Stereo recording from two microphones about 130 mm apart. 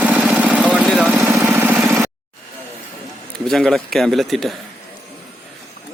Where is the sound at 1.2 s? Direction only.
15° right (ahead or behind).